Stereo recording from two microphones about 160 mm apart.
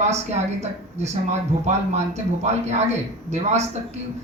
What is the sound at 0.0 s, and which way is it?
Speech, 45° right (ahead or behind).